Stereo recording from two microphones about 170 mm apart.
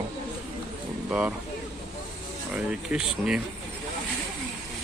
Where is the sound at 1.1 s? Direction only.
5° right (ahead or behind).